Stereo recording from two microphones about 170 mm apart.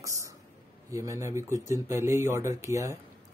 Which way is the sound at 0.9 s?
20° right (ahead or behind).